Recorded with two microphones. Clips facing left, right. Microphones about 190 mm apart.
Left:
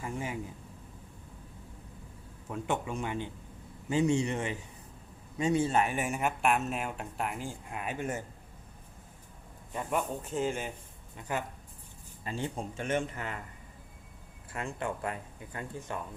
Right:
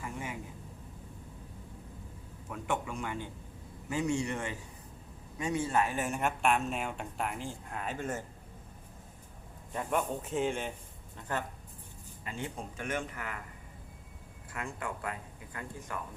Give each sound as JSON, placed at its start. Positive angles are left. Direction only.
{"t": 0.0, "sound": "a sound", "side_deg": 30}
{"t": 2.5, "sound": "speech", "side_deg": 25}
{"t": 9.7, "sound": "speech", "side_deg": 0}
{"t": 12.2, "sound": "speech", "side_deg": 30}
{"t": 14.5, "sound": "speech", "side_deg": 25}